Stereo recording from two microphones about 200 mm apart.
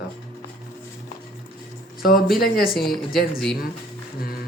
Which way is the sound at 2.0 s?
50° left (ahead or behind).